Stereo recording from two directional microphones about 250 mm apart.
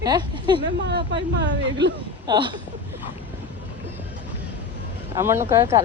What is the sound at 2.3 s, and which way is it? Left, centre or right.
Speech, centre.